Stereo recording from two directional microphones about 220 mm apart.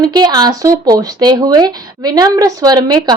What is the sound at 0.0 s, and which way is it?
A woman's voice, 20° right (ahead or behind).